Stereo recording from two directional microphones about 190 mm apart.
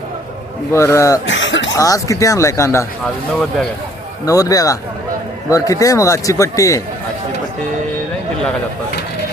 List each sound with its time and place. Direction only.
0.7 s speech: 15° left (ahead or behind)
1.3 s speech: 75° left (ahead or behind)
1.7 s speech: 15° left (ahead or behind)
4.3 s speech: 20° left (ahead or behind)